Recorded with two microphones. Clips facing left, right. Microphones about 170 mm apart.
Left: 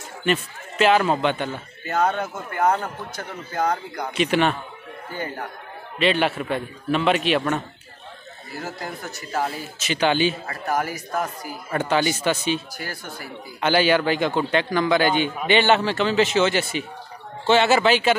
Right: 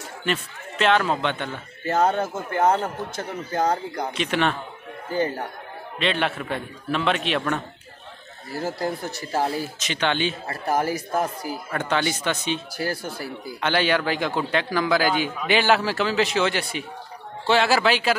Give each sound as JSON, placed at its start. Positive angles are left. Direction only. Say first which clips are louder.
{"t": 0.2, "sound": "a man's voice", "louder": "left 4 dB", "side_deg": 5}
{"t": 1.9, "sound": "a man's voice", "louder": "right 2 dB", "side_deg": -30}
{"t": 4.1, "sound": "speech", "louder": "left 4 dB", "side_deg": 5}
{"t": 5.9, "sound": "speech", "louder": "left 4 dB", "side_deg": 5}
{"t": 8.5, "sound": "speech", "louder": "right 6 dB", "side_deg": -35}
{"t": 9.8, "sound": "speech", "louder": "left 8 dB", "side_deg": 5}
{"t": 10.4, "sound": "speech", "louder": "right 1 dB", "side_deg": -30}
{"t": 11.7, "sound": "speech", "louder": "left 4 dB", "side_deg": 5}
{"t": 12.7, "sound": "speech", "louder": "right 6 dB", "side_deg": -35}
{"t": 13.6, "sound": "speech", "louder": "left 3 dB", "side_deg": 5}